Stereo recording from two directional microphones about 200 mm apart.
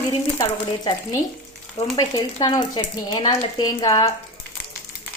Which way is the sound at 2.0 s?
20° left (ahead or behind).